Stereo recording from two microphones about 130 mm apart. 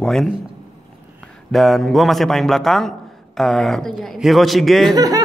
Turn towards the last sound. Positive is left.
turn(degrees=-25)  # may be behind; listen again after turning